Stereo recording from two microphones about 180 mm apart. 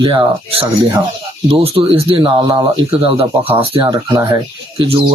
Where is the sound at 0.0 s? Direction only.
30° right (ahead or behind).